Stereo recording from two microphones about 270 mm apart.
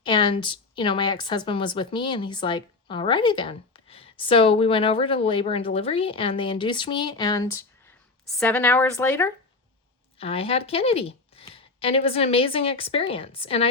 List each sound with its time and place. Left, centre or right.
0.0 s a woman's voice: centre
10.2 s a woman's voice: left